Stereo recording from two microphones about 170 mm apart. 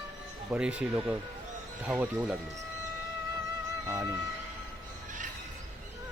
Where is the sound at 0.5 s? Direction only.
5° right (ahead or behind).